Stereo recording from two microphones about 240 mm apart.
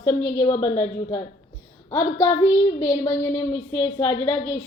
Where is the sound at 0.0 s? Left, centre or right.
Centre.